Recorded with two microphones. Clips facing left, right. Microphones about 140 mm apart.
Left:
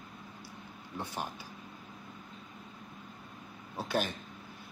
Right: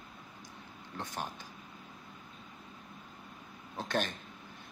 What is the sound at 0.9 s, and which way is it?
Speech, 10° left (ahead or behind).